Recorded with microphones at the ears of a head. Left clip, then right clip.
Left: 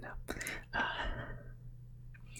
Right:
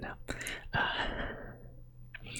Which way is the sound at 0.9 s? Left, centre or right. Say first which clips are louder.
Right 6 dB; right.